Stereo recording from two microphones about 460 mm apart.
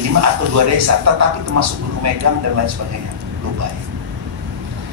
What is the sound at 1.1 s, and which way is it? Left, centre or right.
Speech, right.